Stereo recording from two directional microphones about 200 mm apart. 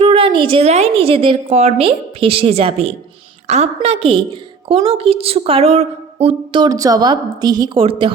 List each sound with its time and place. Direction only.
0.0 s a woman's voice: 25° right (ahead or behind)